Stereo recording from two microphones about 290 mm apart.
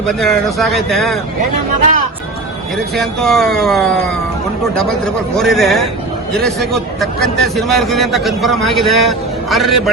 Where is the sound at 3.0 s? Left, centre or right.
Centre.